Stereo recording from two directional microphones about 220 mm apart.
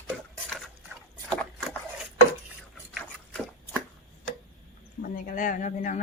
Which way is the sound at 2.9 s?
5° left (ahead or behind).